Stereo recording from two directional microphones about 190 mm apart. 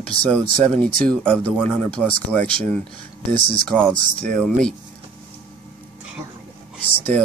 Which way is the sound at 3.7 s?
5° left (ahead or behind).